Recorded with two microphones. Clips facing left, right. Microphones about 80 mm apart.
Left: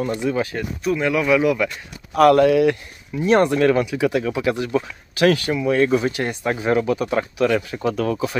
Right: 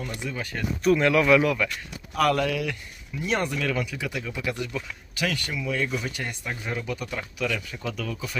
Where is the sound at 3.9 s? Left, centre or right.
Left.